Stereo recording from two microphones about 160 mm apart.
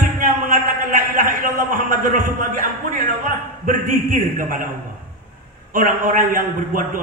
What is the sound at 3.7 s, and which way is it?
A man's voice, 55° right (ahead or behind).